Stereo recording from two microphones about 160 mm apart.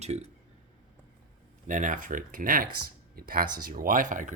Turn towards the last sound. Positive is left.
turn(degrees=-55)  # may be behind; listen again after turning